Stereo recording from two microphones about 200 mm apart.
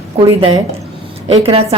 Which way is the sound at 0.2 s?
25° right (ahead or behind).